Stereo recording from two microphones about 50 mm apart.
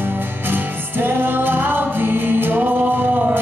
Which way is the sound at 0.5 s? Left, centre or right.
Right.